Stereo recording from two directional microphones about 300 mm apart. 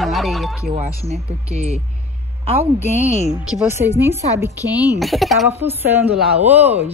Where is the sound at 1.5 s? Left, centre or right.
Right.